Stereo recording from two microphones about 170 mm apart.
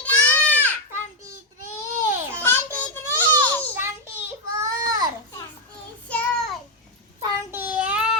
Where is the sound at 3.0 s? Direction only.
10° left (ahead or behind).